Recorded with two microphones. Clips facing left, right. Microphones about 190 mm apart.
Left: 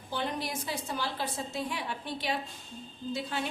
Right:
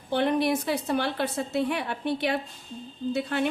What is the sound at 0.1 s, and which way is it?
A woman's voice, 65° right (ahead or behind).